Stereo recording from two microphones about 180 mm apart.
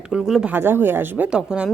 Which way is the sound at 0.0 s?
5° right (ahead or behind).